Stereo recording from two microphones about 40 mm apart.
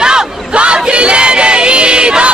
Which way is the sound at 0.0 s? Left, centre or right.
Right.